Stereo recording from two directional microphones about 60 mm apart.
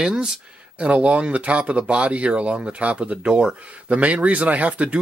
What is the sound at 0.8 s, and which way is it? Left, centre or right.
Speech, right.